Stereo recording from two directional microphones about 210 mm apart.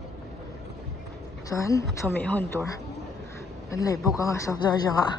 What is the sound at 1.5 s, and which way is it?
A woman's voice, 15° left (ahead or behind).